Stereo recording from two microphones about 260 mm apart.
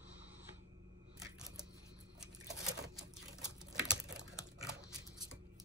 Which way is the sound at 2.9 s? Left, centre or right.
Centre.